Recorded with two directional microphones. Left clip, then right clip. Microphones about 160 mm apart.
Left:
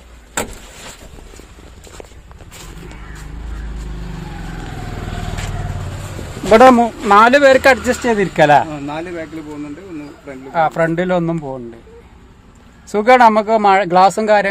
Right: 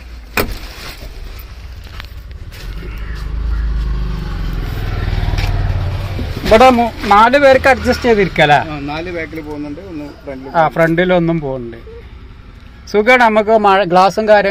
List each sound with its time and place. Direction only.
6.5 s speech: 35° left (ahead or behind)
10.7 s speech: 10° left (ahead or behind)
12.9 s speech: 15° left (ahead or behind)